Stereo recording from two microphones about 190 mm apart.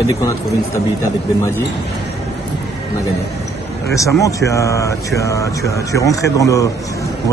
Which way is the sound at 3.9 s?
15° left (ahead or behind).